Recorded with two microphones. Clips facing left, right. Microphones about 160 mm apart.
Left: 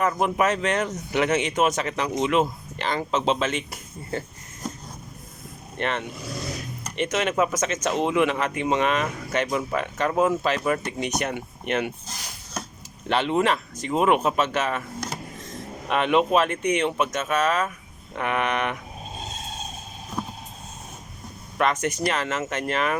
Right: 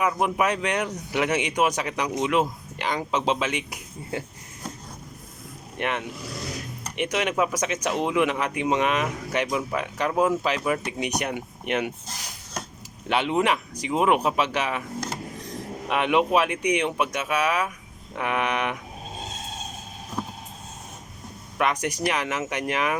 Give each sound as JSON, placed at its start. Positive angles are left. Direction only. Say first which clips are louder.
{"t": 0.0, "sound": "speech", "louder": "left 1 dB", "side_deg": -5}
{"t": 5.7, "sound": "speech", "louder": "left 1 dB", "side_deg": -10}
{"t": 13.1, "sound": "speech", "louder": "left 1 dB", "side_deg": -10}
{"t": 21.6, "sound": "speech", "louder": "left 1 dB", "side_deg": -15}